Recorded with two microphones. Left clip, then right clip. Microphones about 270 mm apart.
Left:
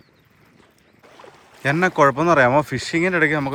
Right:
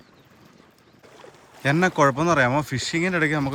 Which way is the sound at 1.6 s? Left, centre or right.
Centre.